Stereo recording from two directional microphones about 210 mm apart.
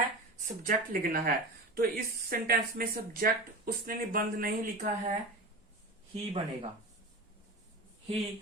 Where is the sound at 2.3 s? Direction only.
45° right (ahead or behind).